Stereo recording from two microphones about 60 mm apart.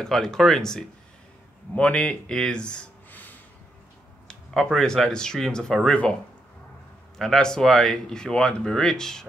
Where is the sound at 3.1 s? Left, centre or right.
Left.